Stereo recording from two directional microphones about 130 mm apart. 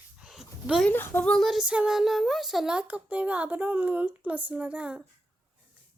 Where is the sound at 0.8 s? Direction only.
15° left (ahead or behind); by 5.0 s 10° right (ahead or behind).